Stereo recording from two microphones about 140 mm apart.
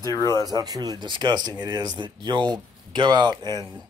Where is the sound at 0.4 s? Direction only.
30° right (ahead or behind).